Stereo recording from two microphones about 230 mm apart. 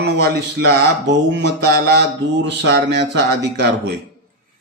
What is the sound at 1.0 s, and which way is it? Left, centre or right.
Speech, right.